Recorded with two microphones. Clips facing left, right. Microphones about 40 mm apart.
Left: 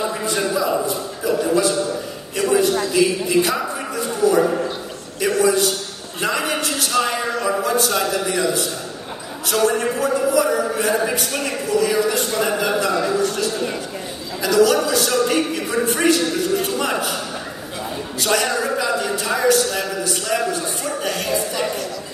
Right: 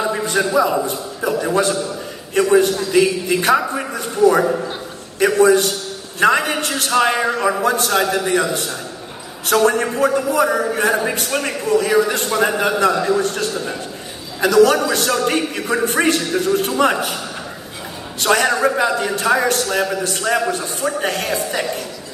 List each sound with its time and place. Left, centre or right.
0.3 s a man's voice: right
18.2 s a man's voice: right